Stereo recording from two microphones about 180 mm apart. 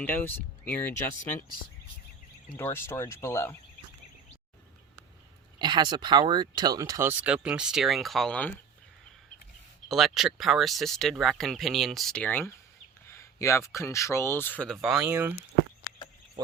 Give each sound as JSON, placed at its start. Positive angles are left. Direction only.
{"t": 0.0, "sound": "speech", "side_deg": 10}
{"t": 2.6, "sound": "speech", "side_deg": 10}
{"t": 5.5, "sound": "speech", "side_deg": -25}
{"t": 9.9, "sound": "speech", "side_deg": 0}
{"t": 14.9, "sound": "speech", "side_deg": -15}